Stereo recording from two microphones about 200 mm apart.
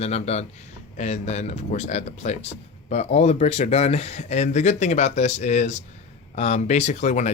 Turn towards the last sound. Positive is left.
turn(degrees=35)  # may be behind; listen again after turning